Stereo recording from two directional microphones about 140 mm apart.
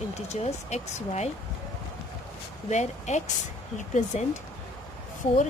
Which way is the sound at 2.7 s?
55° left (ahead or behind).